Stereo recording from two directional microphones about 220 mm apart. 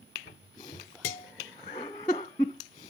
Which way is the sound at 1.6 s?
20° left (ahead or behind).